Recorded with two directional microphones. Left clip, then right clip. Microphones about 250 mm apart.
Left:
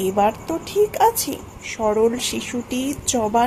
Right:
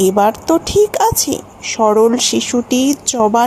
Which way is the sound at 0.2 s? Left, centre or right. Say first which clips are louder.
Right 7 dB; right.